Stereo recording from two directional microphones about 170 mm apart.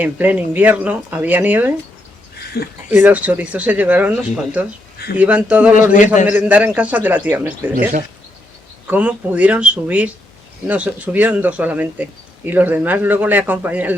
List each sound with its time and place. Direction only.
0.0 s speech: 10° right (ahead or behind)
2.5 s speech: 70° left (ahead or behind)
2.9 s speech: 10° right (ahead or behind)
8.9 s speech: 10° right (ahead or behind)